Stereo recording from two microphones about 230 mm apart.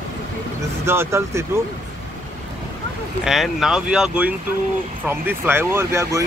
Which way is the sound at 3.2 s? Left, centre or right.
Centre.